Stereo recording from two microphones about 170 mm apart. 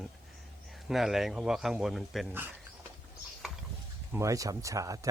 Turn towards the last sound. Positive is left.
turn(degrees=-20)  # may be behind; listen again after turning